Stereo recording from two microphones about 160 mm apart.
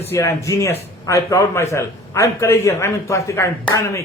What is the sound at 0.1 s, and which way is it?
A man's voice, 20° left (ahead or behind).